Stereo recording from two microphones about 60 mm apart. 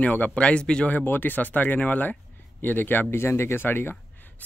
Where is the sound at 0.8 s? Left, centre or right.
Left.